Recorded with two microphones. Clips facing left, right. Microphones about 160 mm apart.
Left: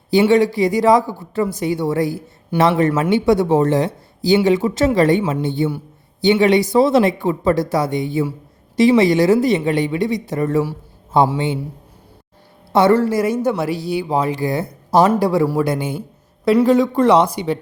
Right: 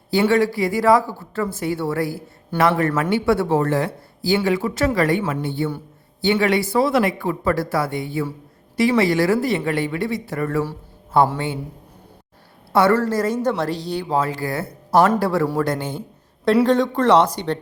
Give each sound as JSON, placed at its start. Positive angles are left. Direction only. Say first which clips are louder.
{"t": 0.1, "sound": "speech", "louder": "left 4 dB", "side_deg": 20}
{"t": 12.7, "sound": "speech", "louder": "left 3 dB", "side_deg": 20}